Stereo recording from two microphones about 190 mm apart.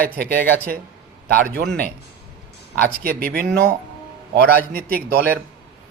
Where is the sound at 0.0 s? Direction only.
50° right (ahead or behind).